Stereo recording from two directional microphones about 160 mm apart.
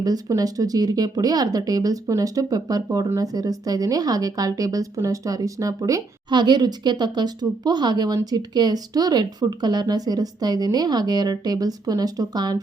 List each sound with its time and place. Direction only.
0.0 s speech: 25° right (ahead or behind)